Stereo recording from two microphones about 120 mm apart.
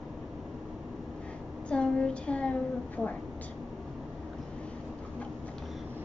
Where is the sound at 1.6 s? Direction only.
10° left (ahead or behind).